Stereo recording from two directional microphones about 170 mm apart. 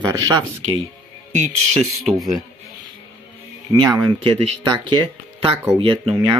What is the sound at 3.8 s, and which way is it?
Speech, 20° right (ahead or behind).